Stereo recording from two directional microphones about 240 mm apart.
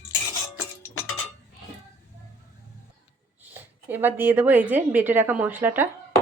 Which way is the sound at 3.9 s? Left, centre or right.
Centre.